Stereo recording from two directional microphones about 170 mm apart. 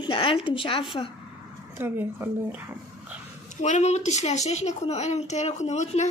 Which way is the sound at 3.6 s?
45° left (ahead or behind).